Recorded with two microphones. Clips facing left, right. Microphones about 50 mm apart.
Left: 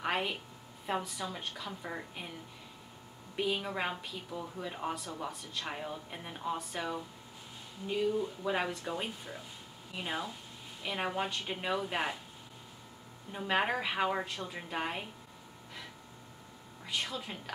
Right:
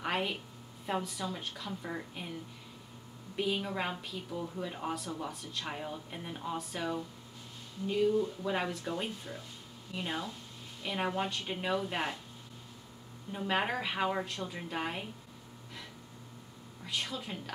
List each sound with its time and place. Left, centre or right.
0.0 s a sound: centre
0.8 s speech: centre
3.3 s speech: centre
13.3 s speech: centre
16.8 s speech: centre